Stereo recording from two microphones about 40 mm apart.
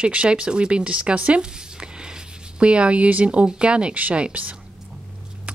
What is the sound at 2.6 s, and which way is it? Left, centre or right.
Speech, right.